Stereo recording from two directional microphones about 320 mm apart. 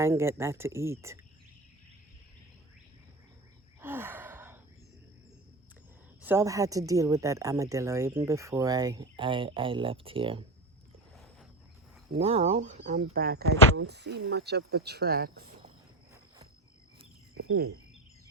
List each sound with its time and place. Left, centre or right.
0.0 s speech: centre
3.8 s gasp: centre
6.2 s speech: centre
11.1 s wild animals: centre
12.1 s speech: centre
17.3 s cricket: right